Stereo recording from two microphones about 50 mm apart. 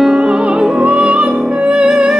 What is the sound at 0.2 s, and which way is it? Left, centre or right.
Music, right.